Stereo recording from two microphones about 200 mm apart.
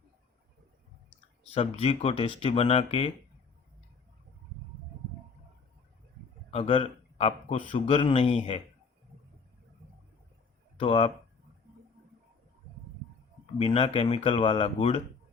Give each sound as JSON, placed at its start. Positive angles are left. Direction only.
{"t": 1.5, "sound": "speech", "side_deg": 30}
{"t": 6.5, "sound": "speech", "side_deg": 30}
{"t": 10.8, "sound": "speech", "side_deg": 25}
{"t": 13.6, "sound": "speech", "side_deg": 25}